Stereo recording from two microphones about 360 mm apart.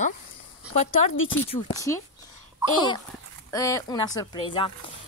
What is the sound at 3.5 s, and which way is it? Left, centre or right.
Speech, centre.